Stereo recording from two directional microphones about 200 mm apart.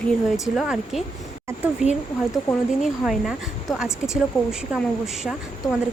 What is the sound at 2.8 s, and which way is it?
Speech, centre (ahead or behind).